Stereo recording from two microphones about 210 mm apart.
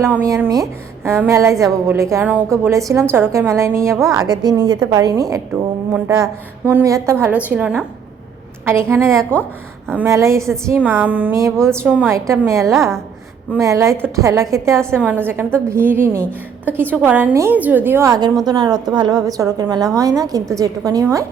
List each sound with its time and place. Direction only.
0.0 s a woman's voice: 15° right (ahead or behind)